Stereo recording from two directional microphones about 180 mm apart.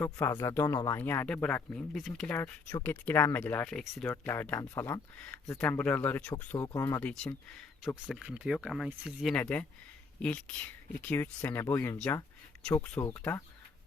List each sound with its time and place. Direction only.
0.0 s speech: 15° left (ahead or behind)
7.0 s speech: 5° left (ahead or behind)
8.2 s speech: 5° right (ahead or behind)
9.3 s speech: 10° left (ahead or behind)